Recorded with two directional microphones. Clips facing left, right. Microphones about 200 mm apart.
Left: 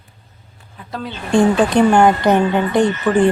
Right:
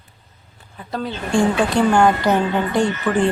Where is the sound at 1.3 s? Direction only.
20° left (ahead or behind).